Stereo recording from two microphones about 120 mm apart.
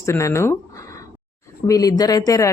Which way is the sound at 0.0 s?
25° left (ahead or behind).